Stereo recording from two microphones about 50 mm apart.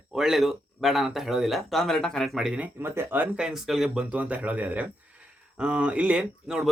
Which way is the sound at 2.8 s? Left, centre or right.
Right.